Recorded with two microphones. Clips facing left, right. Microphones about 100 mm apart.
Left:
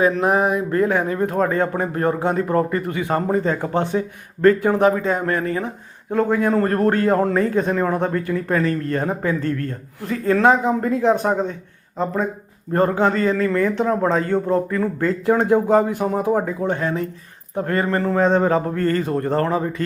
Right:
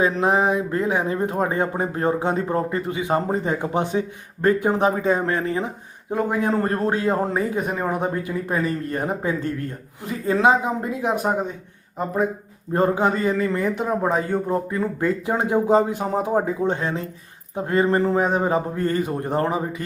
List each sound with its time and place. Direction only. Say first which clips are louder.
0.0 s speech: left 2 dB; 25° right (ahead or behind)